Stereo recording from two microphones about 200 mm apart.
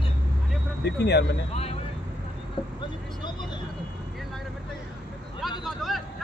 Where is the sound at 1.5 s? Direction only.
30° left (ahead or behind).